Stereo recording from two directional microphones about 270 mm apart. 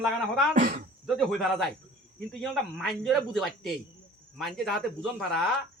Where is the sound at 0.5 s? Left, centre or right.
Right.